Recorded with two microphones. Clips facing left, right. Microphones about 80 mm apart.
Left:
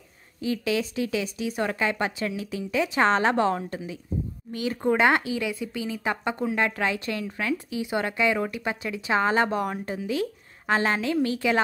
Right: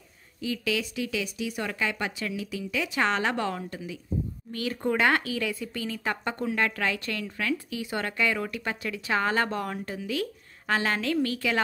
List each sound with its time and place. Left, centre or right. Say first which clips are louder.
0.4 s speech: left 3 dB; left
4.5 s speech: left 4 dB; centre